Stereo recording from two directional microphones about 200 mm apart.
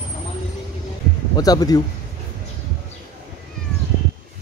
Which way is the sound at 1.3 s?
20° left (ahead or behind).